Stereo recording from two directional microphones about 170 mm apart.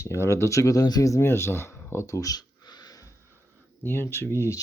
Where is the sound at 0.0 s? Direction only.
15° left (ahead or behind).